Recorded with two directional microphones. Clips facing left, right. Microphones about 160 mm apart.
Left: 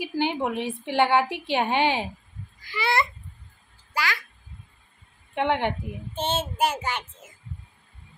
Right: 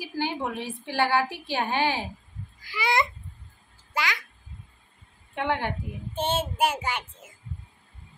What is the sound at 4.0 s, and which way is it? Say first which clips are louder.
Speech: left 1 dB; 20° right (ahead or behind).